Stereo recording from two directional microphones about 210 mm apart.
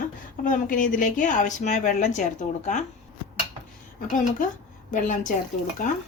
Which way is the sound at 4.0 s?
40° left (ahead or behind).